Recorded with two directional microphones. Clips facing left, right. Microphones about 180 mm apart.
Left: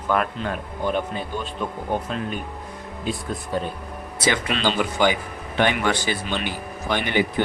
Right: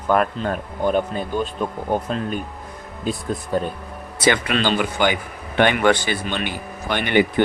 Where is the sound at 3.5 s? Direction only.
45° right (ahead or behind).